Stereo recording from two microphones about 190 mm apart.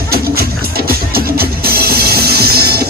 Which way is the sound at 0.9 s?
50° right (ahead or behind).